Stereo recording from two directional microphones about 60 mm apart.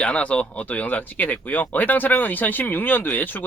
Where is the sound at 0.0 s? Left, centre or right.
Left.